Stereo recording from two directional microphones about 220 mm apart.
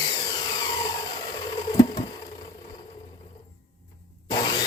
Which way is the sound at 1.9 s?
20° left (ahead or behind).